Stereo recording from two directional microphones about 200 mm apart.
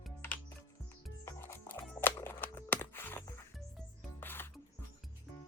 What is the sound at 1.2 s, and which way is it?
Music, 10° left (ahead or behind).